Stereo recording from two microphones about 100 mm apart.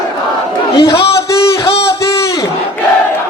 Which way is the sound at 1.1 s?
30° left (ahead or behind).